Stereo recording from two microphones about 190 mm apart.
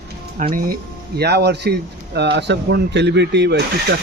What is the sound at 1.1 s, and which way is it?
Speech, 60° right (ahead or behind).